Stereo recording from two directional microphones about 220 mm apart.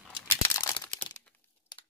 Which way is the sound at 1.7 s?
20° left (ahead or behind).